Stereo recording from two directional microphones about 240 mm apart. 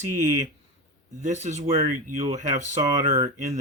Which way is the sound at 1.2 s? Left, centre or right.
Right.